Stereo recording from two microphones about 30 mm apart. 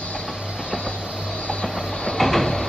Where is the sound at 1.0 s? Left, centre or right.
Centre.